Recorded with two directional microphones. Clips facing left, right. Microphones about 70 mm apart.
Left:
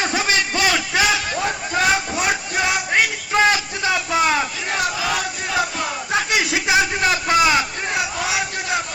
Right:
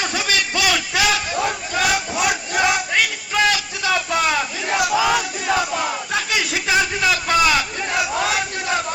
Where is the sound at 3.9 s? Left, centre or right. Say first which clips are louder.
Left 1 dB; centre.